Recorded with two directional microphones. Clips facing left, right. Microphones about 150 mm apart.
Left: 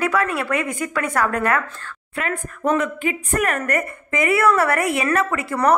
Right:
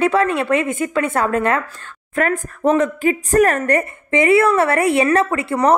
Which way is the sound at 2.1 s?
40° right (ahead or behind).